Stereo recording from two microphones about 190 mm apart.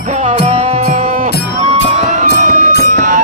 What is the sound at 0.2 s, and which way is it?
Music, 40° right (ahead or behind).